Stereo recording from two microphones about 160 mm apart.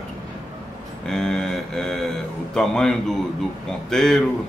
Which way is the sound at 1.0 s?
5° left (ahead or behind).